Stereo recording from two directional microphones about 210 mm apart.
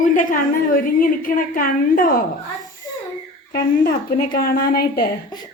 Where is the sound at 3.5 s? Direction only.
45° left (ahead or behind).